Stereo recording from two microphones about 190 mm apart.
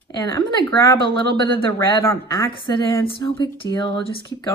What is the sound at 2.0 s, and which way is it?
A woman's voice, 15° left (ahead or behind).